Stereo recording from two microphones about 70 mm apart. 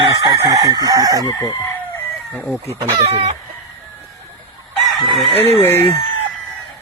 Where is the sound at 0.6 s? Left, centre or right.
Right.